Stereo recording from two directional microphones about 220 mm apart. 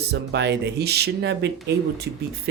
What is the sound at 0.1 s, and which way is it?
Speech, 50° right (ahead or behind).